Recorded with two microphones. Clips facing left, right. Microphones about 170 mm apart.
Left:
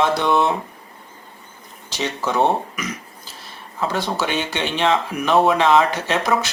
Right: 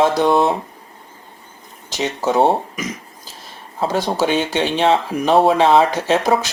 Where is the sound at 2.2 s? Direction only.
40° right (ahead or behind).